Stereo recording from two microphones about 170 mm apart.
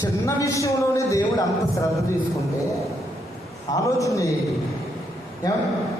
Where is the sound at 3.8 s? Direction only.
20° left (ahead or behind).